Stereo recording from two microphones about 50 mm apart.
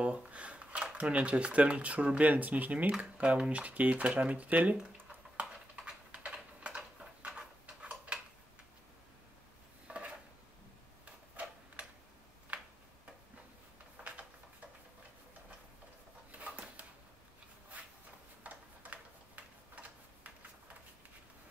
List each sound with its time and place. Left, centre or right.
0.0 s shuffling cards: right
1.1 s speech: right
5.4 s typing: right
9.8 s a sound: right
11.4 s tick-tock: right
16.3 s a sound: right
18.4 s tick-tock: right